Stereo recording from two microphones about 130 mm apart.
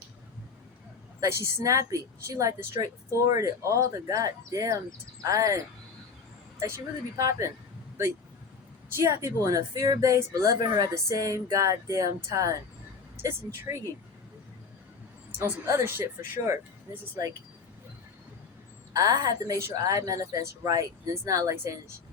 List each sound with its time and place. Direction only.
1.2 s speech: 25° right (ahead or behind)
7.2 s speech: 25° right (ahead or behind)
9.0 s speech: 20° right (ahead or behind)
15.4 s speech: 20° right (ahead or behind)
18.9 s speech: 25° right (ahead or behind)